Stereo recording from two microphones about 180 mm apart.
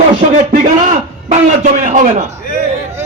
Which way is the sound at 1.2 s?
45° right (ahead or behind).